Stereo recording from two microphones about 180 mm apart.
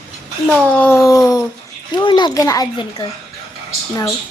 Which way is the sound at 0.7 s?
10° left (ahead or behind).